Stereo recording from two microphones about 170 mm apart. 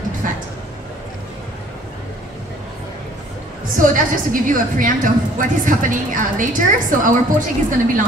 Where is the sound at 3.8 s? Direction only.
50° right (ahead or behind).